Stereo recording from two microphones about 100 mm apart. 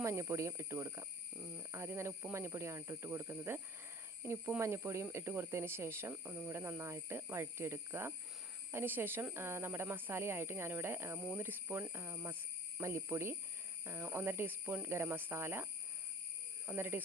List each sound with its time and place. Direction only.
0.0 s speech: 25° right (ahead or behind)